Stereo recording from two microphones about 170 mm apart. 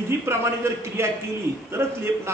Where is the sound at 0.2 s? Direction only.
15° right (ahead or behind).